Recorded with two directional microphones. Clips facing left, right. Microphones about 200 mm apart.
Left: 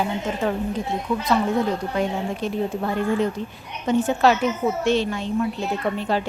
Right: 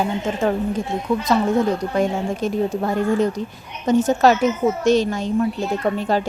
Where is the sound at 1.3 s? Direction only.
40° right (ahead or behind).